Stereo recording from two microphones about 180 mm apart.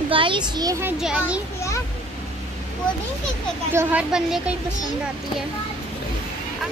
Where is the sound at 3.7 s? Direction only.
10° right (ahead or behind).